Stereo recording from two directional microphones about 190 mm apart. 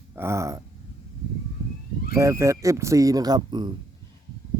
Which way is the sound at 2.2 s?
15° right (ahead or behind).